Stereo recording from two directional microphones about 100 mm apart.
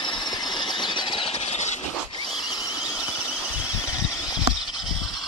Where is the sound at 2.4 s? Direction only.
40° left (ahead or behind).